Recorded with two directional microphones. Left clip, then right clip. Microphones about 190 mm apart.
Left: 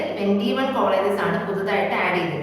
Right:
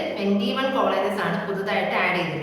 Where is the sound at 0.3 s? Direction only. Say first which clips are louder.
Even; centre (ahead or behind).